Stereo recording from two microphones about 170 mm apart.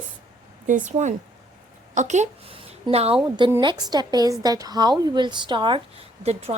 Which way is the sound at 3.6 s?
25° right (ahead or behind).